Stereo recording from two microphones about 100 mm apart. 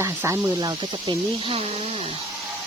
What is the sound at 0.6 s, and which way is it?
Speech, 45° right (ahead or behind).